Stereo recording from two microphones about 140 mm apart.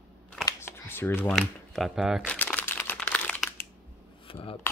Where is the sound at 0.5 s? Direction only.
20° left (ahead or behind).